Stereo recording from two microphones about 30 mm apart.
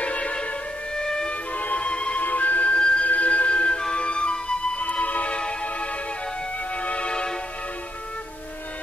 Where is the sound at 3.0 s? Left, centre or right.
Left.